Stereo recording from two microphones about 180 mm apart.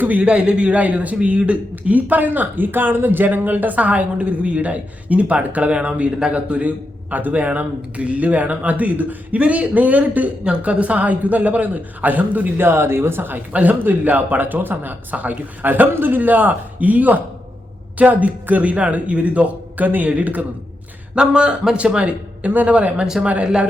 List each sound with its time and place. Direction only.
0.0 s a man's voice: 5° right (ahead or behind)